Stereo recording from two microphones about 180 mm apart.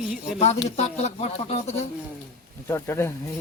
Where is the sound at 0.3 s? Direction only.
35° left (ahead or behind).